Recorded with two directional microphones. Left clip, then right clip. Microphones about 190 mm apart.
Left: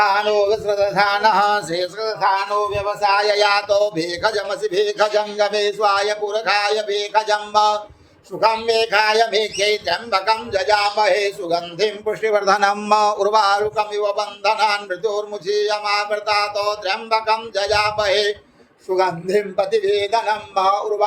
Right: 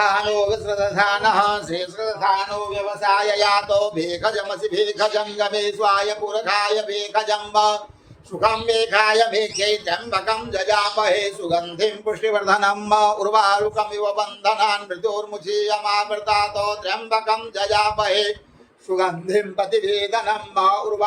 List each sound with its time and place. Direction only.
0.0 s a man's voice: 20° left (ahead or behind)